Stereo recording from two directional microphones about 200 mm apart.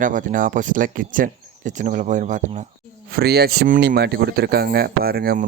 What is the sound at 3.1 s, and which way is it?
Speech, 50° right (ahead or behind).